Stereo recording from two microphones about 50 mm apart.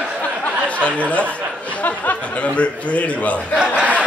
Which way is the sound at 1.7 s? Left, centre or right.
Left.